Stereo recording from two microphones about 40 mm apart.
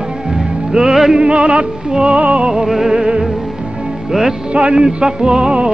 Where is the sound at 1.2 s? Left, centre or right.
Right.